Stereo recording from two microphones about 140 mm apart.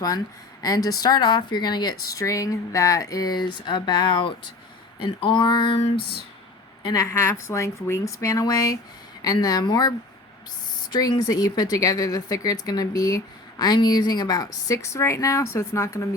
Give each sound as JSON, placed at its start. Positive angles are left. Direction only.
{"t": 0.6, "sound": "speech", "side_deg": 25}
{"t": 6.8, "sound": "speech", "side_deg": 25}
{"t": 10.9, "sound": "speech", "side_deg": 30}